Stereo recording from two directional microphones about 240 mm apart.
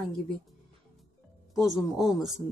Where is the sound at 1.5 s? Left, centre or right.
Centre.